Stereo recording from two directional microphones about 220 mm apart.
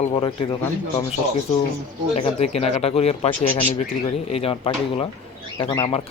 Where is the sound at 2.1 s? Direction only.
30° left (ahead or behind).